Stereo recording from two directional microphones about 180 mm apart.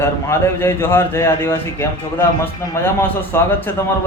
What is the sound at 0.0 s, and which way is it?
A man's voice, 15° left (ahead or behind).